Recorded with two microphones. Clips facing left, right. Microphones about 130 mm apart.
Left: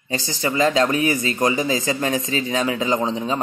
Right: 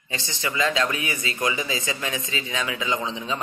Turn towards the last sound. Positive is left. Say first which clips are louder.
# left 6 dB
turn(degrees=40)  # may be behind; listen again after turning